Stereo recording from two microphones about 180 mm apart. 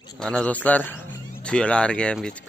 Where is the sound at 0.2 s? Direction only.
5° left (ahead or behind).